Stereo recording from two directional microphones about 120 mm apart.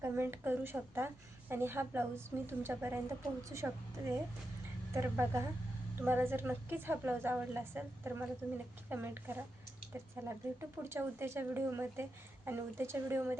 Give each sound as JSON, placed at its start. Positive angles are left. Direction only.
{"t": 0.0, "sound": "a woman's voice", "side_deg": -20}